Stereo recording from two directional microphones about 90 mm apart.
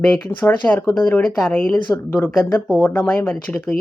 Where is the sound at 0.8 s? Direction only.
50° left (ahead or behind).